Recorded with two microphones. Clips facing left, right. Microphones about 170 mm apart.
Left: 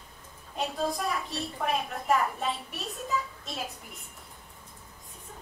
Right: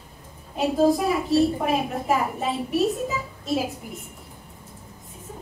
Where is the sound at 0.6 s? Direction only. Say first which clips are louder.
Right 11 dB; centre (ahead or behind).